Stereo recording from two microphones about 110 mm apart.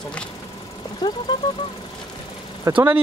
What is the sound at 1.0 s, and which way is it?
Speech, 40° left (ahead or behind).